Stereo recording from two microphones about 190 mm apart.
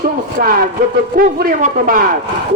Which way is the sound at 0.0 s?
50° right (ahead or behind).